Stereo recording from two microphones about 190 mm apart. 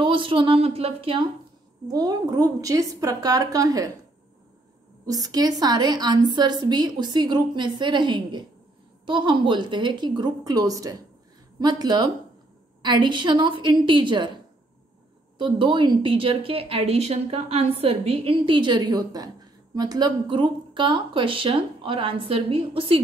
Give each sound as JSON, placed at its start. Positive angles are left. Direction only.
{"t": 0.0, "sound": "a woman's voice", "side_deg": -25}
{"t": 1.9, "sound": "a woman's voice", "side_deg": -20}
{"t": 5.0, "sound": "a woman's voice", "side_deg": -20}
{"t": 15.3, "sound": "a woman's voice", "side_deg": -25}